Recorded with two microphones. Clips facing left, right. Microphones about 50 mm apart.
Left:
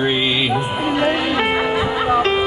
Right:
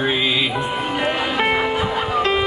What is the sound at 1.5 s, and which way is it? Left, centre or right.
Music, centre.